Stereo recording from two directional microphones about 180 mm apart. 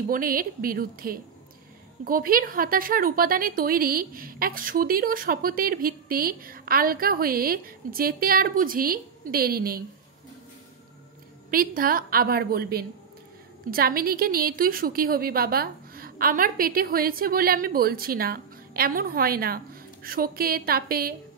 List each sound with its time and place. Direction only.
0.1 s a woman's voice: 55° right (ahead or behind)
11.5 s a woman's voice: 50° right (ahead or behind)